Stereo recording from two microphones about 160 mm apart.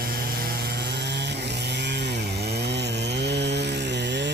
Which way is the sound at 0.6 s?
85° right.